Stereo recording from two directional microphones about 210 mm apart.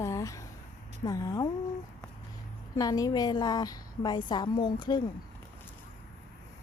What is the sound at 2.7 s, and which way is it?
A woman's voice, 15° left (ahead or behind).